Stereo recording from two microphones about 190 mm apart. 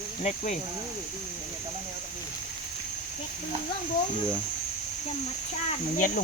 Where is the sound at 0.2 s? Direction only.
40° left (ahead or behind).